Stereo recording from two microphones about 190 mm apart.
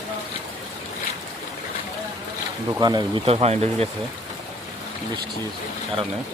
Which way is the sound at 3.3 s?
35° right (ahead or behind).